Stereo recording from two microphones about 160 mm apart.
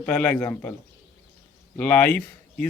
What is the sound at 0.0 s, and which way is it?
Speech, 10° left (ahead or behind).